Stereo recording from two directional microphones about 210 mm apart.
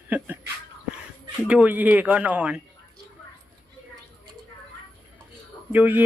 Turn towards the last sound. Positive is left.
turn(degrees=-10)  # may be behind; listen again after turning